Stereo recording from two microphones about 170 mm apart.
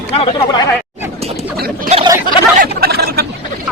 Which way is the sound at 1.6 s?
65° right (ahead or behind).